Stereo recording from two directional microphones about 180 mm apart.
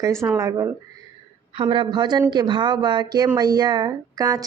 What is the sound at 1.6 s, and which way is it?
Speech, 30° right (ahead or behind).